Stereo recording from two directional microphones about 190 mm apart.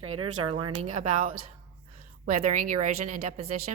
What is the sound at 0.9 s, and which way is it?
A woman's voice, 40° right (ahead or behind).